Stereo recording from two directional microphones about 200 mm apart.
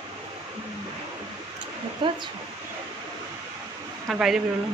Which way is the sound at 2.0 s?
25° right (ahead or behind).